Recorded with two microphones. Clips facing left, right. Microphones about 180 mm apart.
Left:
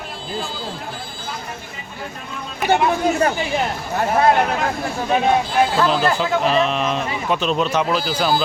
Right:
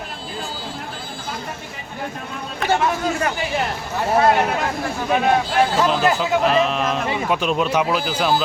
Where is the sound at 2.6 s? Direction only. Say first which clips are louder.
Left 2 dB; 15° left (ahead or behind).